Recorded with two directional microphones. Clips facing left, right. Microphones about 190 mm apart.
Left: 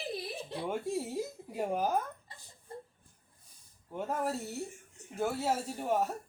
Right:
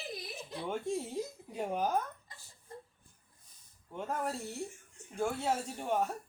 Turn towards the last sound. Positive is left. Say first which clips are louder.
# left 2 dB
turn(degrees=5)  # may be behind; listen again after turning